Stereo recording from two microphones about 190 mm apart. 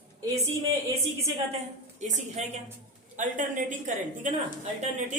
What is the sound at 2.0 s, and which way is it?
A woman's voice, 35° right (ahead or behind).